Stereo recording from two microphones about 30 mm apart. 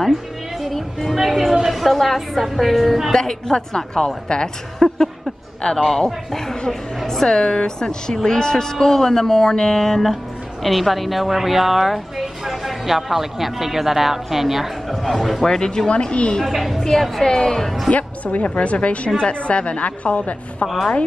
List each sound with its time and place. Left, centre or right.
0.6 s music: centre
1.1 s a woman's voice: centre
3.1 s a woman's voice: centre
4.8 s a sound: centre
5.6 s a woman's voice: left
5.9 s a man's voice: centre
15.4 s a man's voice: centre
15.9 s a woman's voice: left
16.4 s a woman's voice: centre
16.8 s a man's voice: centre
17.9 s a woman's voice: left
20.6 s a woman's voice: centre